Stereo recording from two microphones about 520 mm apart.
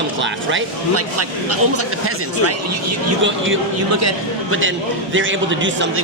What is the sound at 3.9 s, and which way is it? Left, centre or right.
Speech, right.